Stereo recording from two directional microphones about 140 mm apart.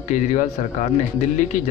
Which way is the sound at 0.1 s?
60° left (ahead or behind).